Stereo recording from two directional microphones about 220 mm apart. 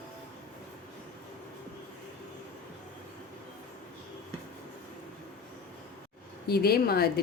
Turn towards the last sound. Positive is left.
turn(degrees=45)  # may be behind; listen again after turning